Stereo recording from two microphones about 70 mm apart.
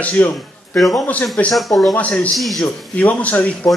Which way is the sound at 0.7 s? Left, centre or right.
Centre.